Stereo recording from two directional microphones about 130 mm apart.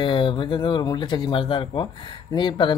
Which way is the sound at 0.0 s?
40° left (ahead or behind).